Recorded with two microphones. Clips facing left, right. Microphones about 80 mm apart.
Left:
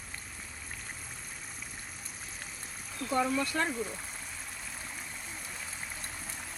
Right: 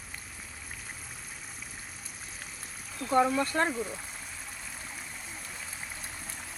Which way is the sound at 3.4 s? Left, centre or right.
Right.